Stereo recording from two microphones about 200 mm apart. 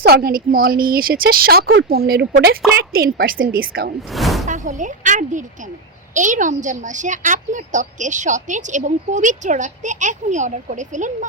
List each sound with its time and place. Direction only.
0.0 s a woman's voice: 50° right (ahead or behind)
4.1 s speech: centre (ahead or behind)
4.4 s a woman's voice: 40° right (ahead or behind)